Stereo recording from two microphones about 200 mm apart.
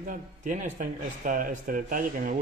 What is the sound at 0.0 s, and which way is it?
Speech, 40° right (ahead or behind).